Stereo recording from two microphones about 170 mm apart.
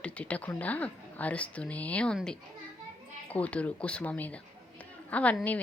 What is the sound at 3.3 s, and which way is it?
Speech, 10° left (ahead or behind).